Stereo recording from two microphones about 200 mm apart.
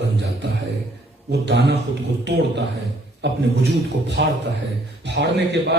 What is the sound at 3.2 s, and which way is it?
A man's voice, 60° right (ahead or behind).